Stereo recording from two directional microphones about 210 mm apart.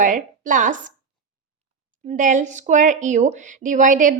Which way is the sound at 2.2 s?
35° right (ahead or behind).